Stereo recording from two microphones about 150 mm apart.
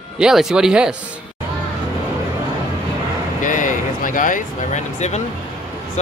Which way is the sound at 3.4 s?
60° left (ahead or behind).